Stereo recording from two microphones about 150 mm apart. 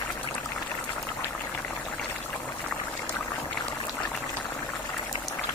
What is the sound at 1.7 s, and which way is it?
Pour, 10° left (ahead or behind).